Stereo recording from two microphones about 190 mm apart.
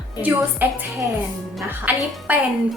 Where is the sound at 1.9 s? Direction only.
10° right (ahead or behind).